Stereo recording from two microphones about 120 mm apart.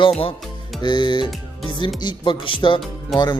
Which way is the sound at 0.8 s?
40° left (ahead or behind).